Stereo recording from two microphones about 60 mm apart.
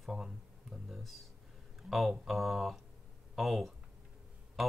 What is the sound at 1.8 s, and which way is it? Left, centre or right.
Speech, centre.